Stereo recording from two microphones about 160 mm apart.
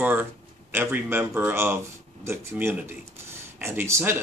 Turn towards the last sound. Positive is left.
turn(degrees=-15)  # may be behind; listen again after turning